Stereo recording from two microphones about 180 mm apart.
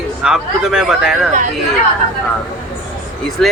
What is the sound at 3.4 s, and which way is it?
Speech, 5° left (ahead or behind).